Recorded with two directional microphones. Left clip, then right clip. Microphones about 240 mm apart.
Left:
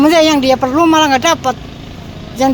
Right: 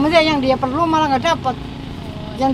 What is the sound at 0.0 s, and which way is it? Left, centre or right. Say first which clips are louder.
Speech: left 5 dB; left.